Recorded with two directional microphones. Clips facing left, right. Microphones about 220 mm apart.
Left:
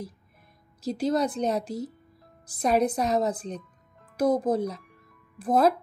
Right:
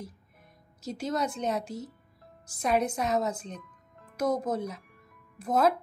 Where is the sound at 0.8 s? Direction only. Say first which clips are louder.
Left 6 dB; 35° left (ahead or behind).